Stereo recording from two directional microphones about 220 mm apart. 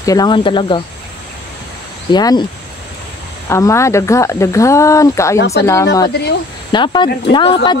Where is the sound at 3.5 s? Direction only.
15° left (ahead or behind).